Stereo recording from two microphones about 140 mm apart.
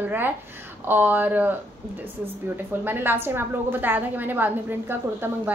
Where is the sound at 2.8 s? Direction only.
15° right (ahead or behind).